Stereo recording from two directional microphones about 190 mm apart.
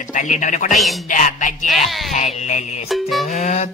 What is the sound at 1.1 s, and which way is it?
Speech, 45° left (ahead or behind).